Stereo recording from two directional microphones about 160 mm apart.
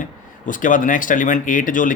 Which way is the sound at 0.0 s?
55° left (ahead or behind).